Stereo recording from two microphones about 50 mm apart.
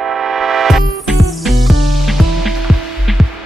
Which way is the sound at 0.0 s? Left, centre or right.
Centre.